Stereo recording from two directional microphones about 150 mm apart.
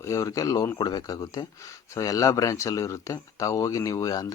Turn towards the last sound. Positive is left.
turn(degrees=25)  # may be behind; listen again after turning